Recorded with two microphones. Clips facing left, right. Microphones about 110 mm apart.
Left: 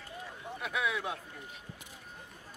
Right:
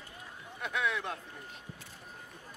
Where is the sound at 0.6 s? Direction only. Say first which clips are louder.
Right 1 dB; 5° left (ahead or behind).